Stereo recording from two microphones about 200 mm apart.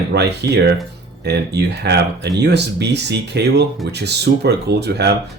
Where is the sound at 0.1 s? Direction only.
55° right (ahead or behind).